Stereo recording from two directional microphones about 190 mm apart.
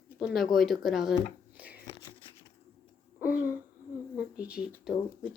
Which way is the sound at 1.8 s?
25° left (ahead or behind).